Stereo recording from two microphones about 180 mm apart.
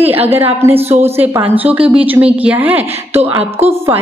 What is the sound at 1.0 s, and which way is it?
A woman's voice, 15° right (ahead or behind).